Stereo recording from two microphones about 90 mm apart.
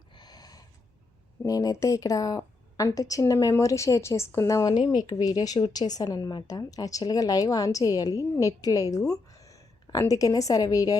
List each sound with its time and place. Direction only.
0.2 s a sound: 50° left (ahead or behind)
1.5 s a woman's voice: 40° left (ahead or behind)
4.9 s a woman's voice: 50° left (ahead or behind)
6.1 s a woman's voice: 40° left (ahead or behind)